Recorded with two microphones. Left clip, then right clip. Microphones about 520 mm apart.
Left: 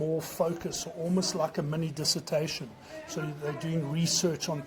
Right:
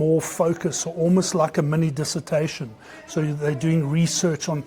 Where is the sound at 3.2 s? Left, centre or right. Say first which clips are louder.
Right 11 dB; right.